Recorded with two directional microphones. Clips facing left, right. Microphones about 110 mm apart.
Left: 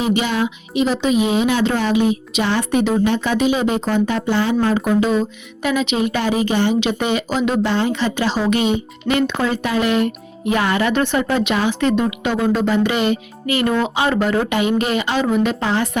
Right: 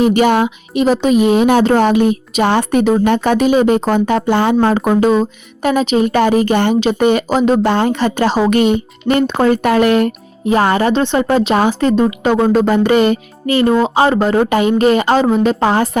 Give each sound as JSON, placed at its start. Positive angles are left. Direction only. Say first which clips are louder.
{"t": 0.0, "sound": "speech", "louder": "right 7 dB", "side_deg": -50}
{"t": 6.7, "sound": "speech", "louder": "right 6 dB", "side_deg": -45}
{"t": 7.7, "sound": "speech", "louder": "right 5 dB", "side_deg": -50}
{"t": 10.4, "sound": "speech", "louder": "right 5 dB", "side_deg": -35}
{"t": 13.6, "sound": "speech", "louder": "right 7 dB", "side_deg": -30}